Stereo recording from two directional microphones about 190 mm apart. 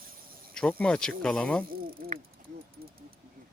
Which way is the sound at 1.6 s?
50° right (ahead or behind).